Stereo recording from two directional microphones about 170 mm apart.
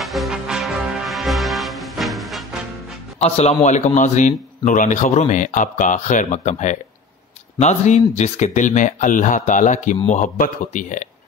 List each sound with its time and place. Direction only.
0.0 s music: centre (ahead or behind)
3.2 s a man's voice: 40° left (ahead or behind)